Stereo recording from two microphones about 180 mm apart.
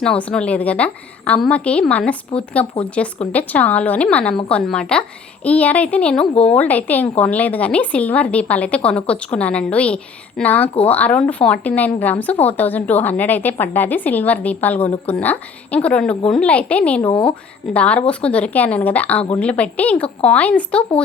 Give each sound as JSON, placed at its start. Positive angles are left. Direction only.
{"t": 0.0, "sound": "a woman's voice", "side_deg": 5}
{"t": 17.0, "sound": "speech", "side_deg": 25}
{"t": 17.7, "sound": "speech", "side_deg": 5}